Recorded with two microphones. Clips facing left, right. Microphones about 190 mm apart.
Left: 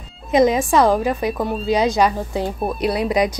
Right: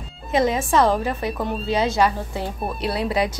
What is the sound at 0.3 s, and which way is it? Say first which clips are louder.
A woman's voice: left 5 dB; 15° left (ahead or behind).